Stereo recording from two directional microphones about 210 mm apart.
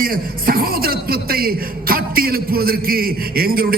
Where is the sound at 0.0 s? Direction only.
45° right (ahead or behind).